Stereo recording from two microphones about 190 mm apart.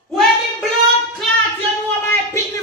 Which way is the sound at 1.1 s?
5° left (ahead or behind).